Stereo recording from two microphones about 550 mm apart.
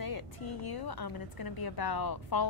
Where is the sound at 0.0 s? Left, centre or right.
Left.